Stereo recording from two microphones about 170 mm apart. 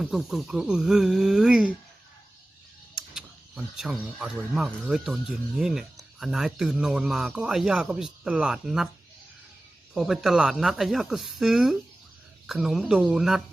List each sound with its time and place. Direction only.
0.0 s speech: centre (ahead or behind)
2.9 s speech: centre (ahead or behind)
9.9 s speech: centre (ahead or behind)